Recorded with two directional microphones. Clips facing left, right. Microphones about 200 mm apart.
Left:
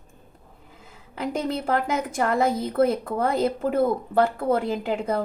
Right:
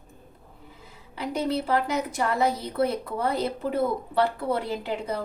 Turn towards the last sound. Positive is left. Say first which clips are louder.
# left 4 dB
turn(degrees=50)  # may be behind; listen again after turning